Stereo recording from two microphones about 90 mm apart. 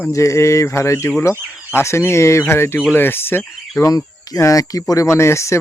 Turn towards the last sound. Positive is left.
turn(degrees=30)  # may be behind; listen again after turning